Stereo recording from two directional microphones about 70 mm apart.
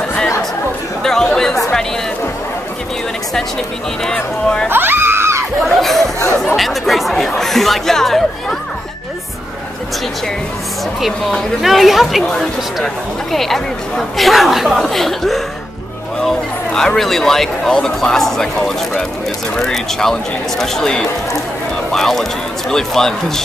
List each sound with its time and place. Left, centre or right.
1.0 s chatter: centre
4.0 s speech: centre
4.6 s a sound: right
5.6 s a sound: centre
6.4 s chatter: centre
11.0 s speech: centre
19.5 s speech: centre